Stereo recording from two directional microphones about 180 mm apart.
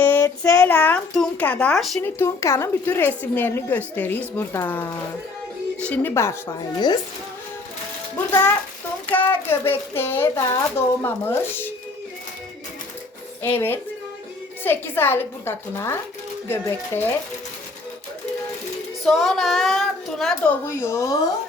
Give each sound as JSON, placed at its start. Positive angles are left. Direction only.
{"t": 0.0, "sound": "speech", "side_deg": 10}
{"t": 2.0, "sound": "speech", "side_deg": 15}
{"t": 6.7, "sound": "a woman's voice", "side_deg": 25}
{"t": 9.0, "sound": "speech", "side_deg": 10}
{"t": 13.4, "sound": "speech", "side_deg": 10}
{"t": 19.0, "sound": "a woman's voice", "side_deg": 0}